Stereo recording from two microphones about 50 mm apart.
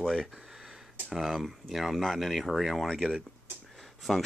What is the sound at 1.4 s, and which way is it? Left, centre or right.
Speech, centre.